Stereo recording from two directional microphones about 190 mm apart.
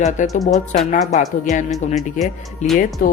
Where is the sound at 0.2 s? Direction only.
45° left (ahead or behind).